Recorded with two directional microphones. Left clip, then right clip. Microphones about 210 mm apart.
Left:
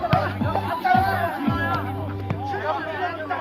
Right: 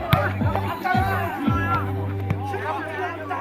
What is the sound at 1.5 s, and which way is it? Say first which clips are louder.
Music: right 1 dB; 45° left (ahead or behind).